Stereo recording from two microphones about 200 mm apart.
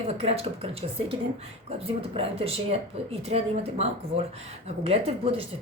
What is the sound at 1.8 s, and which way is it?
A woman's voice, 30° right (ahead or behind).